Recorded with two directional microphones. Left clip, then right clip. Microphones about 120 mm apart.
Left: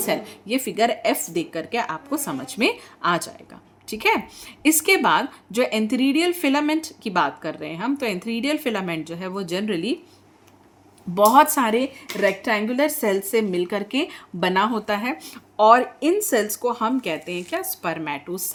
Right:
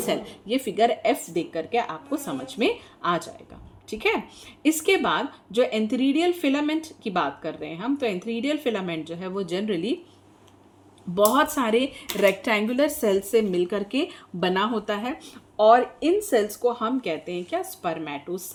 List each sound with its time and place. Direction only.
0.0 s a woman's voice: 30° left (ahead or behind)
11.1 s speech: 45° left (ahead or behind)
11.9 s a woman's voice: 5° left (ahead or behind); by 15.1 s 30° left (ahead or behind)
15.2 s a woman's voice: 45° left (ahead or behind)